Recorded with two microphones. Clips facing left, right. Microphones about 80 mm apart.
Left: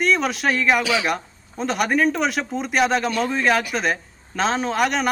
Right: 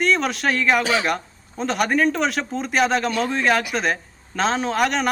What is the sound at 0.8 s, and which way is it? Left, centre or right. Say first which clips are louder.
Speech: right 1 dB; right.